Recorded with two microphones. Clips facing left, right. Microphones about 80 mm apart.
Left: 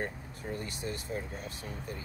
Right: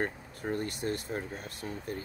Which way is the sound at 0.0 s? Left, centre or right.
Right.